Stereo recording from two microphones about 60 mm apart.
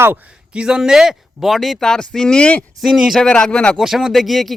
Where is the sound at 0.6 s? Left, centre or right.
Centre.